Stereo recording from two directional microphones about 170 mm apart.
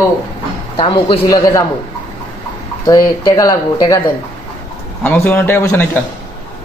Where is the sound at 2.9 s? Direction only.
20° left (ahead or behind).